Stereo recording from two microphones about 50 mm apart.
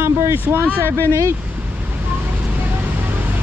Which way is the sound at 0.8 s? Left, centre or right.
Left.